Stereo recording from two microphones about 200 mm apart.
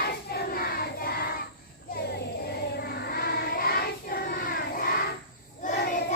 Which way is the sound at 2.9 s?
50° left (ahead or behind).